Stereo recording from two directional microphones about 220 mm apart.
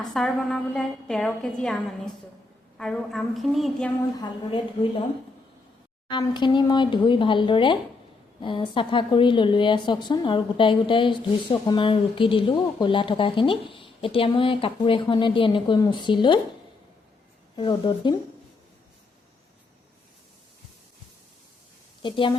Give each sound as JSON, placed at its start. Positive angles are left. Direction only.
{"t": 0.1, "sound": "a woman's voice", "side_deg": 0}
{"t": 4.2, "sound": "speech", "side_deg": 20}
{"t": 6.1, "sound": "speech", "side_deg": 20}
{"t": 17.6, "sound": "speech", "side_deg": 20}
{"t": 22.0, "sound": "a woman's voice", "side_deg": 20}